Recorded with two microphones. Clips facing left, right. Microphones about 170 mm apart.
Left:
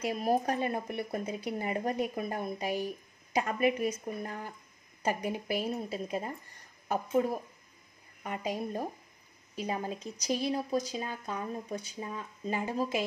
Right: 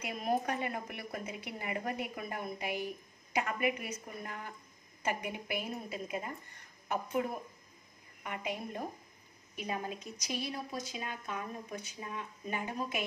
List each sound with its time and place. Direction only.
0.0 s a woman's voice: 30° left (ahead or behind)
8.2 s a woman's voice: 35° left (ahead or behind)